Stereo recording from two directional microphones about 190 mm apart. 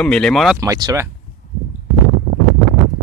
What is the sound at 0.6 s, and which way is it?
Speech, 15° right (ahead or behind).